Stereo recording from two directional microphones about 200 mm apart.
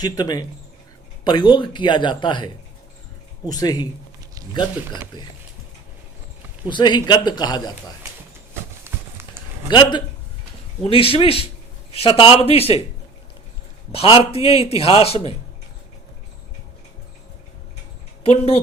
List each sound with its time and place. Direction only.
0.0 s a man's voice: 20° left (ahead or behind)
5.1 s a man's voice: 20° left (ahead or behind)
6.7 s a man's voice: 20° left (ahead or behind)
8.8 s a sound: 10° right (ahead or behind)
9.6 s a man's voice: 25° left (ahead or behind)
13.9 s a man's voice: 30° left (ahead or behind)
18.2 s speech: 30° left (ahead or behind)